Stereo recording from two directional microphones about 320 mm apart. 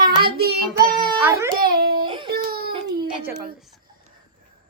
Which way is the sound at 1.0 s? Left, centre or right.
Centre.